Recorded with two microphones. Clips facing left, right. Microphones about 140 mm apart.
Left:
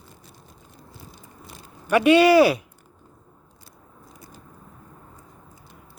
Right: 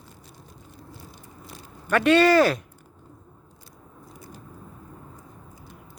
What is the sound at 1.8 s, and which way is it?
Speech, 10° left (ahead or behind).